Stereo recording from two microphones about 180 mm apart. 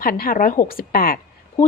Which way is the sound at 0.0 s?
55° left (ahead or behind).